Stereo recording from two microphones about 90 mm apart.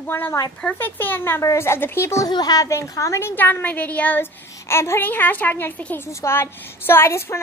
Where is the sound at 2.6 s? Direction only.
35° left (ahead or behind).